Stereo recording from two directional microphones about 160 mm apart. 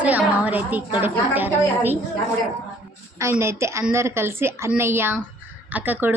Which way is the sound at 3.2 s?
15° right (ahead or behind).